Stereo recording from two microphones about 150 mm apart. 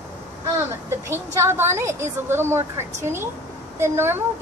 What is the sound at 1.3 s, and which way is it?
A woman's voice, 20° right (ahead or behind).